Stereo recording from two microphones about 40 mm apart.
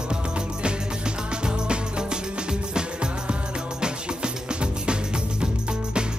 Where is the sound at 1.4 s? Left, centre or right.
Right.